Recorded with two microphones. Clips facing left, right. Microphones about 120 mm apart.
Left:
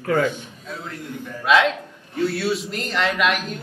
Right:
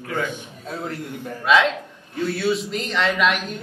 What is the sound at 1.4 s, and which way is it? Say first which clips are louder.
Speech: even; centre (ahead or behind).